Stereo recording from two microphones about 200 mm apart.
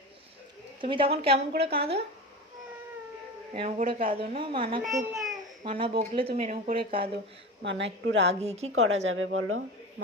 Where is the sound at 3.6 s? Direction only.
30° right (ahead or behind).